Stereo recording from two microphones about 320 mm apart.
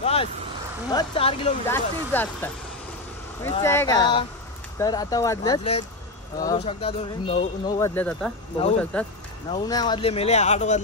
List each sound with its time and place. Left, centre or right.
0.0 s a sound: centre
0.9 s speech: centre
3.4 s speech: centre